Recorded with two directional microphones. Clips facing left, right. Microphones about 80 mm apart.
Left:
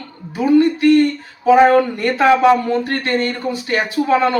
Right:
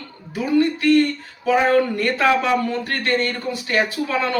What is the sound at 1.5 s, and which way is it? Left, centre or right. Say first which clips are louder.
Speech: left 5 dB; left.